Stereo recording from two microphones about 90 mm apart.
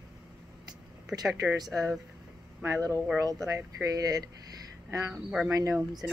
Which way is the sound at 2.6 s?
35° right (ahead or behind).